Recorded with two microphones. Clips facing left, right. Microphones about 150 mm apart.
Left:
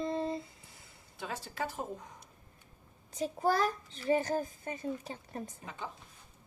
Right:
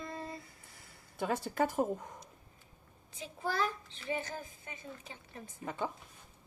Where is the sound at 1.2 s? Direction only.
55° right (ahead or behind).